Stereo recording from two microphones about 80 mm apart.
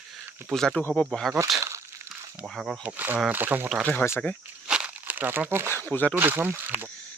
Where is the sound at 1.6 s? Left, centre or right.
Right.